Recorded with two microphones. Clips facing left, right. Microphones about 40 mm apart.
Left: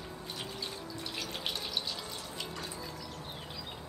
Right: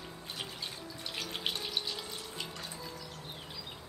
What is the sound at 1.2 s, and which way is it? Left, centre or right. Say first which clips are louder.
Music: right 2 dB; centre.